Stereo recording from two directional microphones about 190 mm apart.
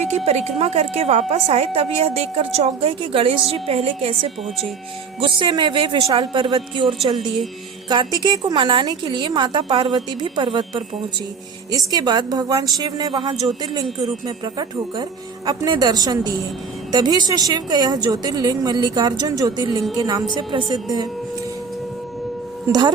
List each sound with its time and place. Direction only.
0.3 s a woman's voice: 35° right (ahead or behind)
5.4 s a woman's voice: 25° right (ahead or behind)
22.6 s speech: 20° right (ahead or behind)